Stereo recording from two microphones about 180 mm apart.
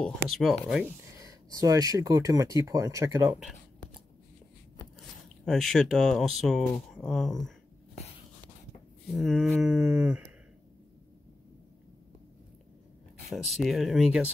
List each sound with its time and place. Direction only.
0.3 s speech: centre (ahead or behind)
1.2 s speech: 20° right (ahead or behind)
5.4 s speech: centre (ahead or behind)
9.1 s speech: centre (ahead or behind)
9.8 s a sound: 5° right (ahead or behind)
13.3 s speech: centre (ahead or behind)